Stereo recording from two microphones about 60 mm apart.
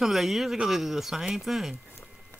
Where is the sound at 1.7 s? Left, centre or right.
Left.